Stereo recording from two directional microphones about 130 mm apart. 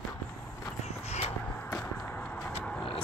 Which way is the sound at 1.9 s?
5° left (ahead or behind).